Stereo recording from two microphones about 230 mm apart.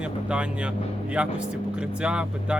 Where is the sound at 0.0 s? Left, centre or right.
Centre.